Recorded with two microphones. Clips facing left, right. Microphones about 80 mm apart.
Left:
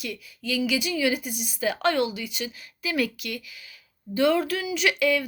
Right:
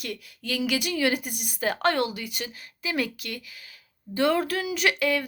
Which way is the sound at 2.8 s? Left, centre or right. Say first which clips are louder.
Left 2 dB; right.